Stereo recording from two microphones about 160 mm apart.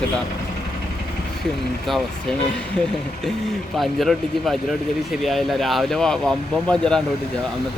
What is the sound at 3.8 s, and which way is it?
Speech, centre (ahead or behind).